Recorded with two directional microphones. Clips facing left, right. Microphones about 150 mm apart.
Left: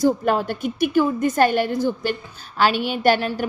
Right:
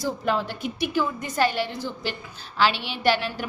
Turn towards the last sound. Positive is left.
turn(degrees=45)  # may be behind; listen again after turning